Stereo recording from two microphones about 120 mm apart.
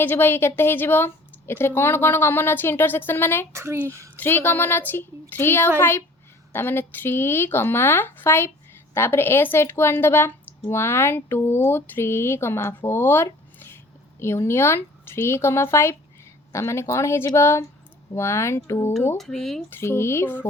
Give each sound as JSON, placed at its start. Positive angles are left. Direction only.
{"t": 0.0, "sound": "speech", "side_deg": 15}
{"t": 3.5, "sound": "speech", "side_deg": -20}
{"t": 4.2, "sound": "speech", "side_deg": 15}
{"t": 19.1, "sound": "speech", "side_deg": 5}
{"t": 19.7, "sound": "speech", "side_deg": 20}